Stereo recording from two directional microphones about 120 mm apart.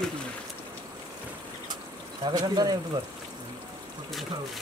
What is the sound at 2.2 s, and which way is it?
Speech, 35° right (ahead or behind).